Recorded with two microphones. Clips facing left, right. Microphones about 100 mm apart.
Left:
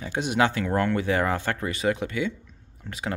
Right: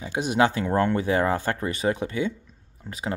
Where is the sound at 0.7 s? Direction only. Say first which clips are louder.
Right 2 dB; 30° right (ahead or behind).